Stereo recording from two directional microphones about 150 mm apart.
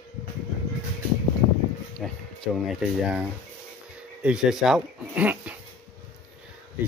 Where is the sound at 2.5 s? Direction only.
5° right (ahead or behind).